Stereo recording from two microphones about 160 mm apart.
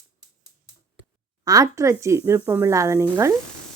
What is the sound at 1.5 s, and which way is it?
Speech, 20° right (ahead or behind).